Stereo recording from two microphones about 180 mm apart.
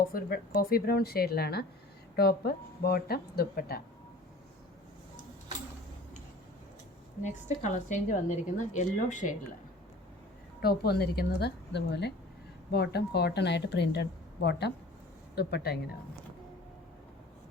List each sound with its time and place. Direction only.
0.1 s speech: 55° left (ahead or behind)
7.2 s a woman's voice: 40° left (ahead or behind)
10.6 s a woman's voice: 60° left (ahead or behind)